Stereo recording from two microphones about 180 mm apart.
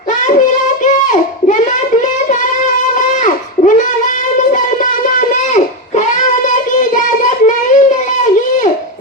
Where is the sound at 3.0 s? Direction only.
45° left (ahead or behind).